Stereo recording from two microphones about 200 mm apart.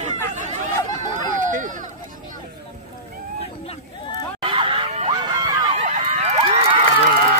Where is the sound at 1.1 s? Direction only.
40° right (ahead or behind).